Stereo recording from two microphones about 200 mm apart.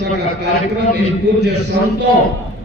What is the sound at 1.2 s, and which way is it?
Speech, 60° right (ahead or behind).